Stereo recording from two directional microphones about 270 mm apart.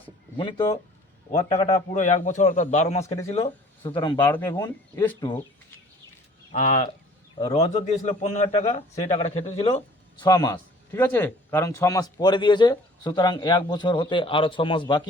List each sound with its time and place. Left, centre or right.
0.3 s a man's voice: centre
6.5 s a man's voice: left